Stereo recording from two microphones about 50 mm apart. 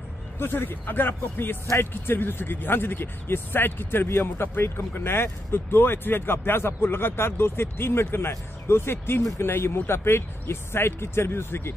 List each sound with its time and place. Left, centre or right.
0.4 s speech: left